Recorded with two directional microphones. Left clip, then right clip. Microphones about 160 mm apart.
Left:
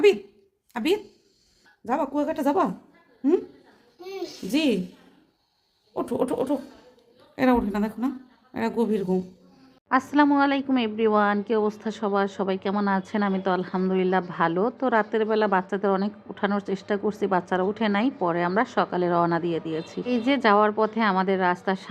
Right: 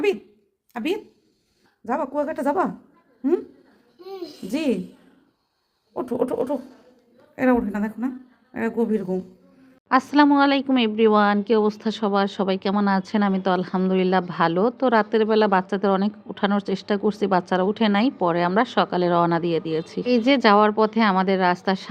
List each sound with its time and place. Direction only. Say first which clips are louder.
0.7 s speech: left 2 dB; 10° right (ahead or behind)
4.5 s a woman's voice: left 1 dB; 5° right (ahead or behind)
5.9 s a woman's voice: right 2 dB; 5° right (ahead or behind)
9.9 s speech: right 3 dB; 30° right (ahead or behind)